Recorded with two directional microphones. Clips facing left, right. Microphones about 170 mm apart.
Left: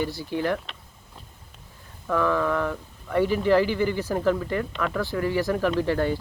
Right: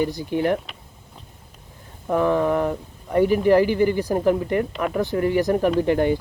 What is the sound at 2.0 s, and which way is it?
Speech, 20° right (ahead or behind).